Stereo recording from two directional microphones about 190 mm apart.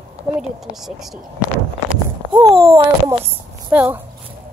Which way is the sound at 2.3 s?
20° right (ahead or behind).